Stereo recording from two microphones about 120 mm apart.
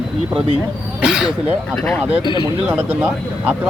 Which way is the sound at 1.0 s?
5° right (ahead or behind).